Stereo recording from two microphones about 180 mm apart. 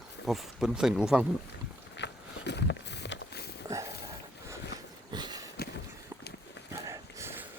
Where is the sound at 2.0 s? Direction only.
70° left (ahead or behind).